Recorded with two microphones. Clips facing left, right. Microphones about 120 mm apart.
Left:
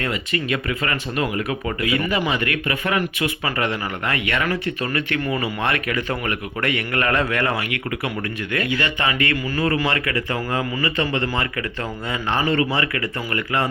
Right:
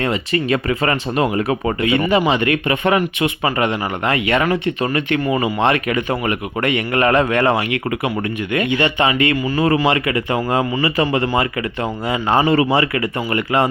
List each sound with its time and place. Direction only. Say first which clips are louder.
0.0 s speech: right 6 dB; 30° right (ahead or behind)